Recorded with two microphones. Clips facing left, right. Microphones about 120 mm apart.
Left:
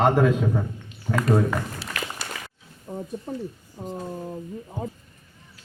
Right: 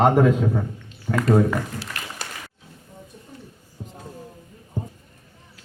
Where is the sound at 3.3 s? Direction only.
90° left.